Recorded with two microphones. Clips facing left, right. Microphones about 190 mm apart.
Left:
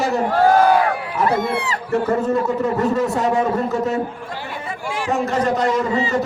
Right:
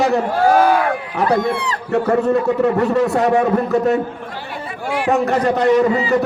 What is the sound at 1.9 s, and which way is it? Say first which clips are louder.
Speech: right 3 dB; 60° right (ahead or behind).